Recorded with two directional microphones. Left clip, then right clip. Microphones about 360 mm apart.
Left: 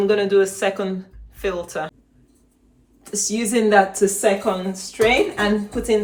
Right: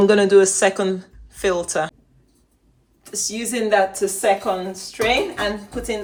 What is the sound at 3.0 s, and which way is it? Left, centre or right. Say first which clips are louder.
Speech: left 3 dB; centre.